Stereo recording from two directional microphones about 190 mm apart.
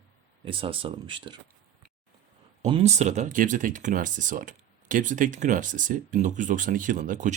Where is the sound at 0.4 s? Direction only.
30° right (ahead or behind).